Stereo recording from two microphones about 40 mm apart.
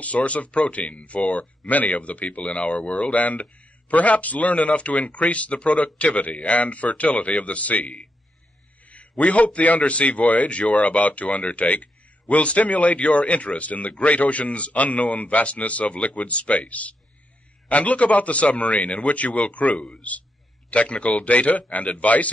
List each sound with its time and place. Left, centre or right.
0.0 s a man's voice: left